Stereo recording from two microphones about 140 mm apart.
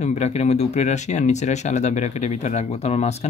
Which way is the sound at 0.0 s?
55° left (ahead or behind).